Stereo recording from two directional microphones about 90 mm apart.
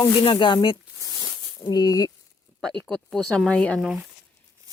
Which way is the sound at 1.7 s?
45° left (ahead or behind).